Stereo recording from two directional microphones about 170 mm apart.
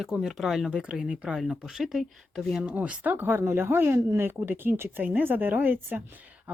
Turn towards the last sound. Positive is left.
turn(degrees=-10)  # may be behind; listen again after turning